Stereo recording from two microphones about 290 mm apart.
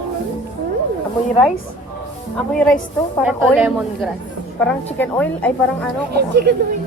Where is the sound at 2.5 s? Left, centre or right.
Centre.